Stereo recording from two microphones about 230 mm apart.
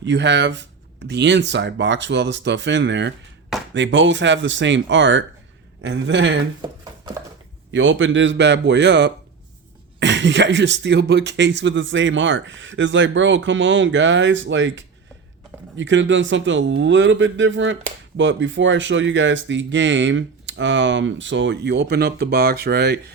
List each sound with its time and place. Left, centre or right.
0.0 s speech: right
6.6 s a sound: centre
7.7 s speech: right